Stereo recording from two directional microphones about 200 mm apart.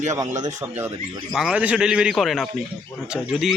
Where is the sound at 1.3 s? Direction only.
5° right (ahead or behind).